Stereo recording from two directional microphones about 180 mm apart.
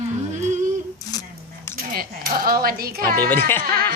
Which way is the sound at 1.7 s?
55° right (ahead or behind).